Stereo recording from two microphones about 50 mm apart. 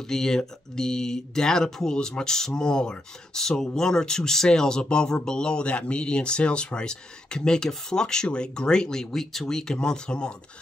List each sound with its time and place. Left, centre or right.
0.1 s speech: centre